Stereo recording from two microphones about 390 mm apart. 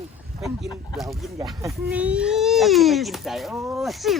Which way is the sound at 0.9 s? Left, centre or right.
Centre.